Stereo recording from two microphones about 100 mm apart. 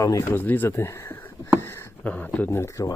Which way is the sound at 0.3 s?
20° left (ahead or behind).